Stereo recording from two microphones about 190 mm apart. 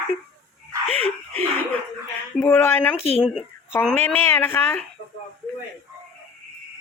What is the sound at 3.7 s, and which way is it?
Speech, 10° left (ahead or behind).